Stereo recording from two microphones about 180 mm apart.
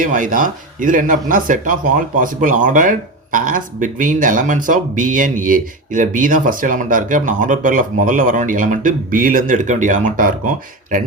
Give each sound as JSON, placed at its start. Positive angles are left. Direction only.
{"t": 0.0, "sound": "speech", "side_deg": -45}